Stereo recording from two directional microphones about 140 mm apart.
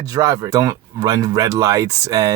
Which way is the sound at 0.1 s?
30° right (ahead or behind).